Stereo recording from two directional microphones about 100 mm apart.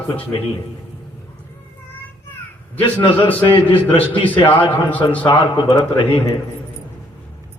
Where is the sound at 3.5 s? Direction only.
20° left (ahead or behind).